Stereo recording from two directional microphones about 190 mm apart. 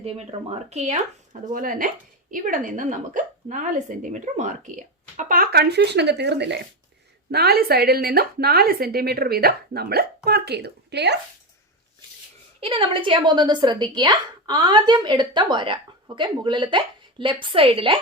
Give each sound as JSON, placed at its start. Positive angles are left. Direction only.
{"t": 0.0, "sound": "a woman's voice", "side_deg": -35}
{"t": 12.5, "sound": "a woman's voice", "side_deg": -30}